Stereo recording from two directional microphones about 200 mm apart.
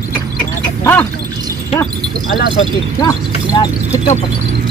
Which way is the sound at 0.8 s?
10° left (ahead or behind).